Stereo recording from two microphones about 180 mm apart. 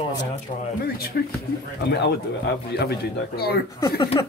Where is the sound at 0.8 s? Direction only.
60° left (ahead or behind).